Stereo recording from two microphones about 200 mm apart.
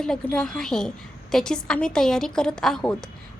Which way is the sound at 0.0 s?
5° left (ahead or behind).